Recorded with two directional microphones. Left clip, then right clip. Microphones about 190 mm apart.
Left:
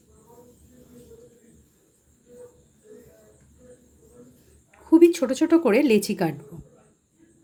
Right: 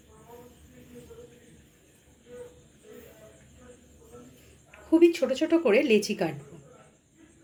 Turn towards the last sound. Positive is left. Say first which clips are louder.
# left 3 dB
turn(degrees=55)  # may be behind; listen again after turning